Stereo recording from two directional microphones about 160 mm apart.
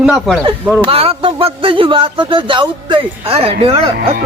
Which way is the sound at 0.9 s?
35° right (ahead or behind).